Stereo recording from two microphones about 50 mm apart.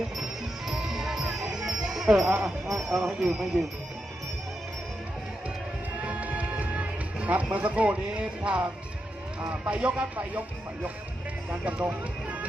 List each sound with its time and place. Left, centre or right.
0.7 s music: centre
2.4 s speech: centre
6.0 s music: right
7.5 s speech: right
11.6 s speech: right